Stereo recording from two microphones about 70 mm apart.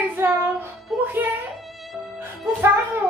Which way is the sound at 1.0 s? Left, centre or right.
Right.